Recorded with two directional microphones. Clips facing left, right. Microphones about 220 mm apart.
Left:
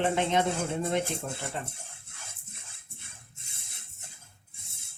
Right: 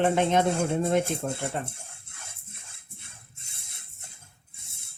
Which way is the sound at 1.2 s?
50° right (ahead or behind).